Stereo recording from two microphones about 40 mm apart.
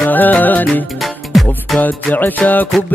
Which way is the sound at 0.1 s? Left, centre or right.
Left.